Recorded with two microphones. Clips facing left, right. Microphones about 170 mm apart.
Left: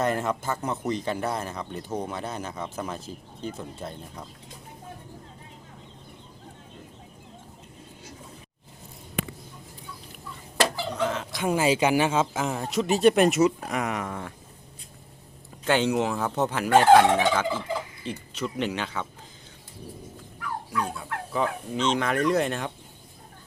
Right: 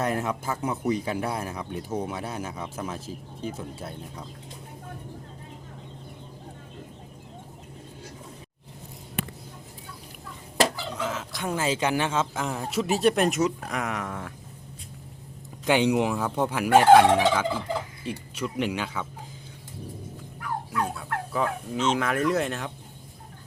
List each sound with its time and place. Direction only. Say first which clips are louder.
0.0 s speech: left 1 dB; 5° right (ahead or behind)
10.9 s fowl: left 3 dB; 5° right (ahead or behind)
11.4 s speech: left 4 dB; 10° left (ahead or behind)
15.6 s speech: right 1 dB; 15° right (ahead or behind)
20.8 s fowl: right 2 dB; centre (ahead or behind)